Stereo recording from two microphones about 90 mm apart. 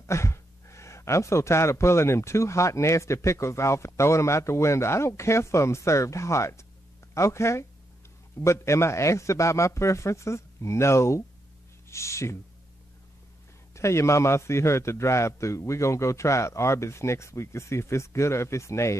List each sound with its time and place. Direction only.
0.0 s speech: 30° left (ahead or behind)
13.7 s speech: 30° left (ahead or behind)